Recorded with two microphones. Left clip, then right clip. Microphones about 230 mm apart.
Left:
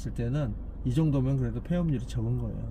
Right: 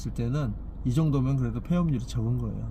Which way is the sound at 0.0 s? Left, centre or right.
Right.